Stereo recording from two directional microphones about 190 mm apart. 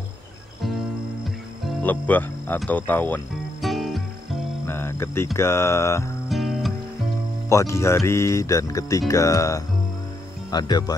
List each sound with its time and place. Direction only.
1.8 s speech: 10° left (ahead or behind)
3.6 s music: centre (ahead or behind)
4.6 s music: 10° left (ahead or behind)
6.2 s music: centre (ahead or behind)
7.4 s speech: 15° left (ahead or behind)